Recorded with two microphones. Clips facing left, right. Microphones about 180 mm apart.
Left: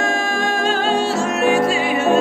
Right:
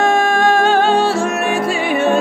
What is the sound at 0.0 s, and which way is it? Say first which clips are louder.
Music: right 7 dB; 60° right (ahead or behind).